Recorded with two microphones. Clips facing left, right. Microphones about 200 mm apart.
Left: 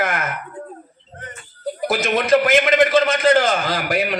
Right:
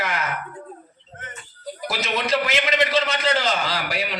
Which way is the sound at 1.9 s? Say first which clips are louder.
Left 7 dB; 50° left (ahead or behind).